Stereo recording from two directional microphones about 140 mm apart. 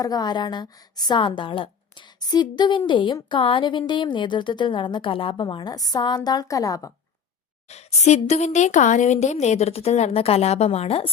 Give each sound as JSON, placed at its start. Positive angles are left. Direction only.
{"t": 0.0, "sound": "a woman's voice", "side_deg": 30}
{"t": 7.7, "sound": "a woman's voice", "side_deg": 50}